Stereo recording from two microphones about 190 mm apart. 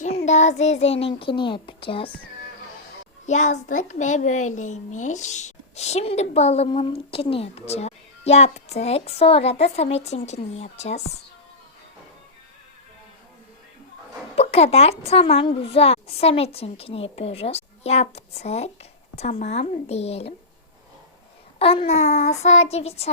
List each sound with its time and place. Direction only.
0.0 s a child's voice: 35° left (ahead or behind)
3.2 s a child's voice: 40° left (ahead or behind)
14.3 s a child's voice: 35° left (ahead or behind)
21.6 s a child's voice: 30° left (ahead or behind)